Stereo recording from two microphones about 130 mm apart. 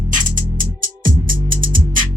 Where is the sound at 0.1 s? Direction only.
90° right.